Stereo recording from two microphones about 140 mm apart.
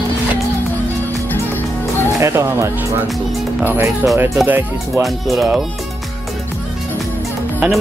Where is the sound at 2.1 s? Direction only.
20° right (ahead or behind).